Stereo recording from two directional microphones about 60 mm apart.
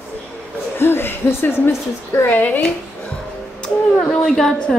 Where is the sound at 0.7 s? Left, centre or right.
Left.